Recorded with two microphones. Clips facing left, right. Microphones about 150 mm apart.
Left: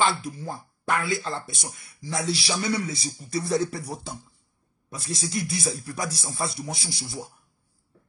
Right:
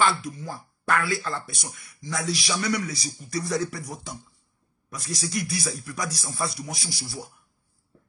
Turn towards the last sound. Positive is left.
turn(degrees=20)  # may be behind; listen again after turning